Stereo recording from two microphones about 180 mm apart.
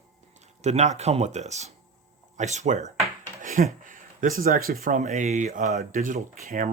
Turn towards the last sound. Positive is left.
turn(degrees=-45)  # may be behind; listen again after turning